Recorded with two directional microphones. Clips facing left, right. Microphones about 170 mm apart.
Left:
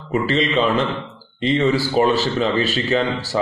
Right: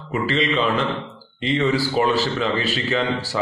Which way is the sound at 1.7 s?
40° left (ahead or behind).